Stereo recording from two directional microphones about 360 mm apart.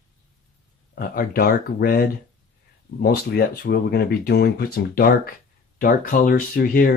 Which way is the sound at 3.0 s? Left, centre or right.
Left.